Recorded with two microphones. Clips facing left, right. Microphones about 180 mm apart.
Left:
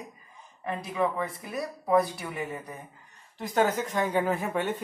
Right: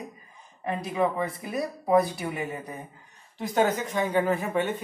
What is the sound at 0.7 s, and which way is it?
Speech, 20° right (ahead or behind).